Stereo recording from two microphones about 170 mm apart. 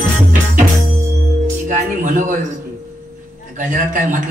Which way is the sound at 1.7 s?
50° right (ahead or behind).